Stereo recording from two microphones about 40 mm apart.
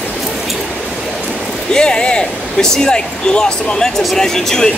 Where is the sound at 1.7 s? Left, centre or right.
Left.